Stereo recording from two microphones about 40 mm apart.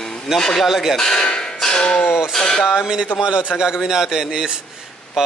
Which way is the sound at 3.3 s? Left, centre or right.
Right.